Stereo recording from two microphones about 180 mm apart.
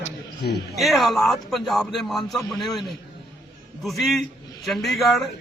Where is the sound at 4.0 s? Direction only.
Centre (ahead or behind).